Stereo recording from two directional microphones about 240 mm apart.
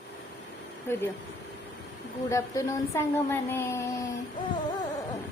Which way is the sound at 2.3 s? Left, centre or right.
Centre.